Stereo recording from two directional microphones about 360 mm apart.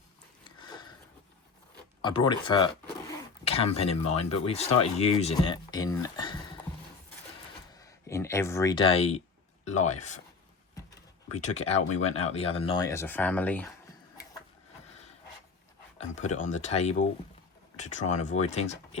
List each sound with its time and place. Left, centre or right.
0.4 s sniff: centre
2.0 s speech: centre
7.7 s speech: centre
11.3 s speech: centre
16.0 s a sound: centre
16.4 s speech: centre